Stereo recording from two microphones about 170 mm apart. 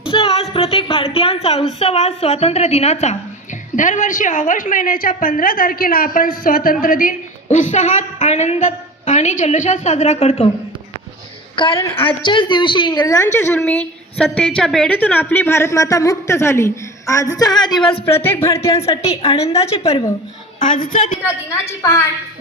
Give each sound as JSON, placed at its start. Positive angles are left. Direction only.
{"t": 0.1, "sound": "music", "side_deg": 35}
{"t": 1.8, "sound": "a woman's voice", "side_deg": 35}
{"t": 11.5, "sound": "a woman's voice", "side_deg": 30}
{"t": 18.2, "sound": "a woman's voice", "side_deg": 15}
{"t": 18.8, "sound": "a woman's voice", "side_deg": 35}
{"t": 20.6, "sound": "a woman's voice", "side_deg": 50}
{"t": 21.5, "sound": "a woman's voice", "side_deg": 15}